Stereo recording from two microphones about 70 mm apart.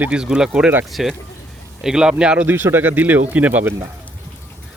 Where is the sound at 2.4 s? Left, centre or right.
Right.